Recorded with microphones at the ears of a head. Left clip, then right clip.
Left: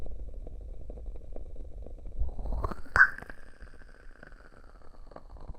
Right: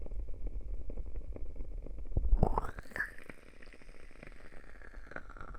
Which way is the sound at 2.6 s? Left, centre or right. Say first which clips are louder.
Left 17 dB; left.